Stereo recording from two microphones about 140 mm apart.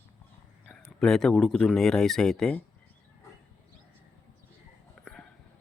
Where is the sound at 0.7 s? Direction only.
5° left (ahead or behind).